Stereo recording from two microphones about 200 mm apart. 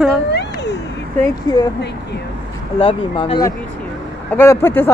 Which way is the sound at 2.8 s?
30° left (ahead or behind).